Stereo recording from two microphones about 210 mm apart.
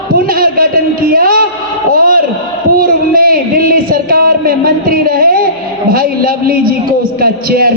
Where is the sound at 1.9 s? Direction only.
40° right (ahead or behind).